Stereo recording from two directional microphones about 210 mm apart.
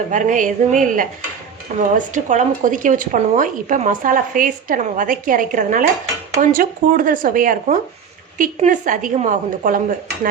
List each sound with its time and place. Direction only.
0.1 s a woman's voice: 35° right (ahead or behind)